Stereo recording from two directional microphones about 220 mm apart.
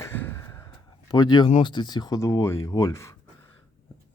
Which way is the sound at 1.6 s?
20° left (ahead or behind).